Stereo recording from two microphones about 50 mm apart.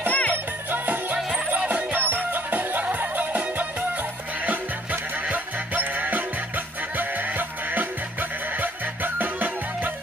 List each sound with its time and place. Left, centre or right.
0.1 s music: left
0.7 s music: right
5.2 s music: right